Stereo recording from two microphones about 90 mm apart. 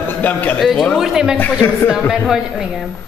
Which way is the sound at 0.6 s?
Centre (ahead or behind).